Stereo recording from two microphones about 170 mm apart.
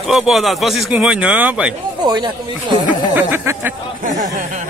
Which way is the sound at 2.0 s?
25° right (ahead or behind).